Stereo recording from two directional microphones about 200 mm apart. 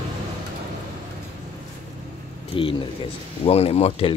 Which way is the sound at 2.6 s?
25° left (ahead or behind).